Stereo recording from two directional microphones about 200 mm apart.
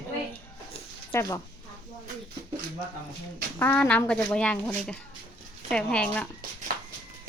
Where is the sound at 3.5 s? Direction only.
10° left (ahead or behind).